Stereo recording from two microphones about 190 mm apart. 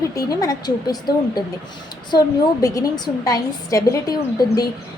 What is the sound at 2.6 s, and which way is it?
A woman's voice, 20° left (ahead or behind).